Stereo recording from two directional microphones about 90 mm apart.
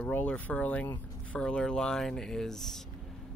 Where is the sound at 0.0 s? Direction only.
15° left (ahead or behind).